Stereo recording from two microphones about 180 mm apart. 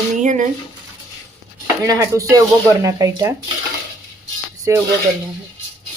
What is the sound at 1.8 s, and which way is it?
Speech, 15° right (ahead or behind).